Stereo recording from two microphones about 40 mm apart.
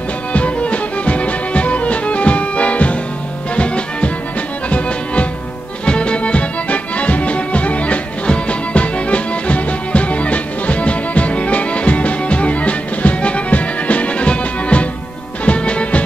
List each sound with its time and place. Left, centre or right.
0.3 s music: left